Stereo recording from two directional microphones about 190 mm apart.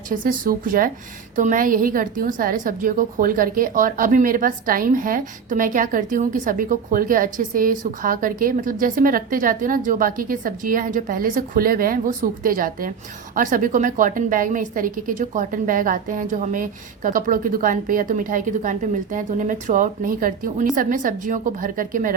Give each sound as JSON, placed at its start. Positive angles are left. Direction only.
{"t": 0.1, "sound": "a woman's voice", "side_deg": -45}